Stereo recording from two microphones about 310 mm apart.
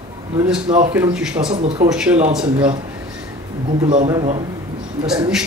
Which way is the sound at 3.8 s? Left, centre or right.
Centre.